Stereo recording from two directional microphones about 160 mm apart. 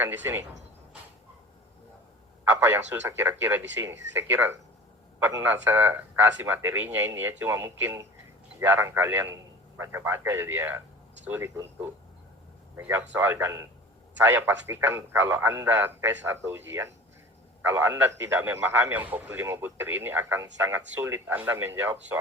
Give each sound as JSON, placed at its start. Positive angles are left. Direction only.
{"t": 0.0, "sound": "speech", "side_deg": -10}
{"t": 2.4, "sound": "speech", "side_deg": -15}